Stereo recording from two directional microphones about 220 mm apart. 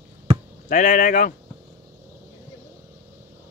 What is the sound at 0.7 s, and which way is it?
Speech, 35° left (ahead or behind).